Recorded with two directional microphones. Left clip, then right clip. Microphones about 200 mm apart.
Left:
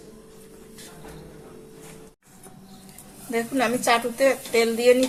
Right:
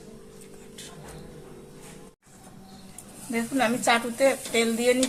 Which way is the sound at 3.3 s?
35° left (ahead or behind).